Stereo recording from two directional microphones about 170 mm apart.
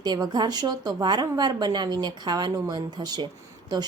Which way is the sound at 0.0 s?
25° right (ahead or behind).